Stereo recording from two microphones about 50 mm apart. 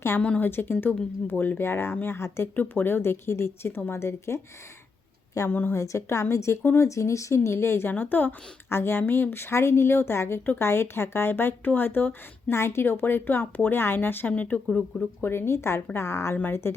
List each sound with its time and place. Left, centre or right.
0.2 s speech: left
0.4 s speech: left
2.6 s speech: left
5.5 s speech: left
5.7 s a woman's voice: left
6.3 s a woman's voice: left
6.7 s speech: left
8.7 s speech: left
9.3 s speech: left
12.5 s speech: left
12.8 s speech: left
14.3 s speech: left
15.2 s speech: left